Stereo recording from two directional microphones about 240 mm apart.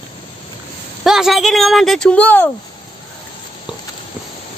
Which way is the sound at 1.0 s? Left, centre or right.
Centre.